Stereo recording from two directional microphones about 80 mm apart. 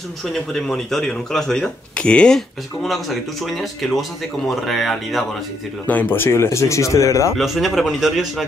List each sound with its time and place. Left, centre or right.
0.2 s speech: centre
5.9 s speech: left
7.3 s speech: centre